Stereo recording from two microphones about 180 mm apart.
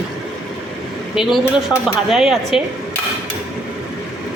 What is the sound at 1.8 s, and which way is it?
Speech, centre (ahead or behind).